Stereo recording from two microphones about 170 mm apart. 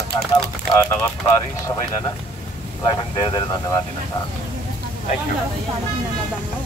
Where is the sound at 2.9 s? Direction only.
25° left (ahead or behind).